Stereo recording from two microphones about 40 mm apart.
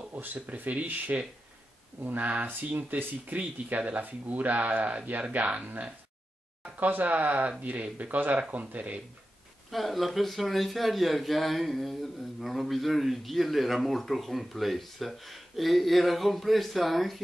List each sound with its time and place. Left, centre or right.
0.1 s speech: right
6.8 s speech: right
9.7 s a man's voice: centre